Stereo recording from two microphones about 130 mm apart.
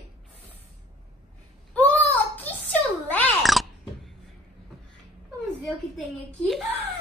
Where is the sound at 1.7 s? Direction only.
10° left (ahead or behind).